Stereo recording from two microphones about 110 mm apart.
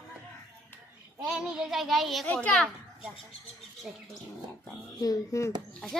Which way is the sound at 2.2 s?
15° left (ahead or behind).